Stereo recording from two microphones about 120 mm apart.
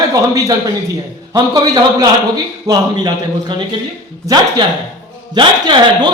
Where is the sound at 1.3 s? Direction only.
35° right (ahead or behind).